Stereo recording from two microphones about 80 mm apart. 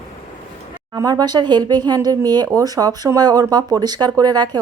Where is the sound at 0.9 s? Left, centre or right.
Right.